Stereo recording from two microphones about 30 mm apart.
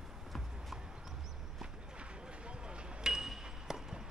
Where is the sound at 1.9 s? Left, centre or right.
Right.